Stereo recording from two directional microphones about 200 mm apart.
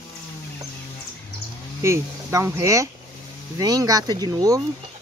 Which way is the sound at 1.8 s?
15° right (ahead or behind).